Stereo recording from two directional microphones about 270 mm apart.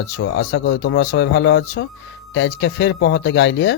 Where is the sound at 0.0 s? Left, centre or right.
Left.